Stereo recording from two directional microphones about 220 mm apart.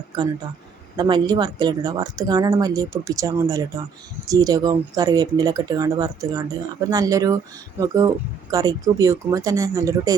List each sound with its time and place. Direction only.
0.1 s speech: 20° right (ahead or behind)